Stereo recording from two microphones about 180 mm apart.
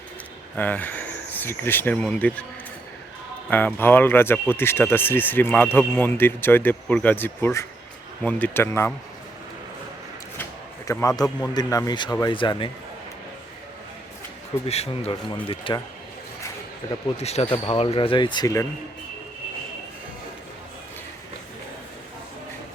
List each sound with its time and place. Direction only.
0.5 s speech: 10° left (ahead or behind)
3.5 s speech: 10° left (ahead or behind)
11.2 s speech: 20° left (ahead or behind)
14.7 s speech: 35° left (ahead or behind)
17.2 s speech: 35° left (ahead or behind)